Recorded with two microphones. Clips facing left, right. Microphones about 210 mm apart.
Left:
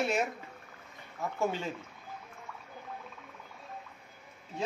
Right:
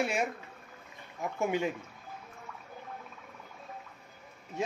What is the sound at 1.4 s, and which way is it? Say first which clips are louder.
Speech: right 2 dB; 15° right (ahead or behind).